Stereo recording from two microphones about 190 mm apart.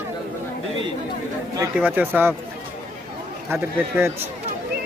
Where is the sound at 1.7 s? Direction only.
10° right (ahead or behind).